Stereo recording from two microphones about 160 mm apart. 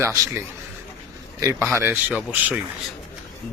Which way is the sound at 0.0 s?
15° right (ahead or behind).